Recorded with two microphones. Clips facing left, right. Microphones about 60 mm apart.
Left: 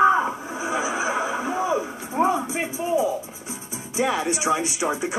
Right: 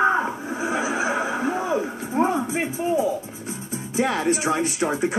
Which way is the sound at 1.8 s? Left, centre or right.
Centre.